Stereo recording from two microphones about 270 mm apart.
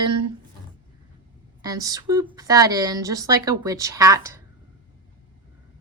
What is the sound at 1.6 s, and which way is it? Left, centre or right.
A woman's voice, centre.